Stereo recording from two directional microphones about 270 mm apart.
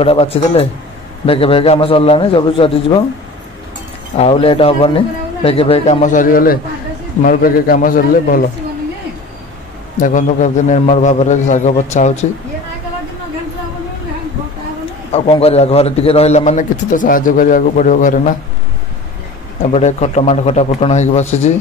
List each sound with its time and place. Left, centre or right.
0.0 s a man's voice: left
4.2 s a man's voice: left
9.9 s a man's voice: left
15.1 s a man's voice: left
19.7 s a man's voice: left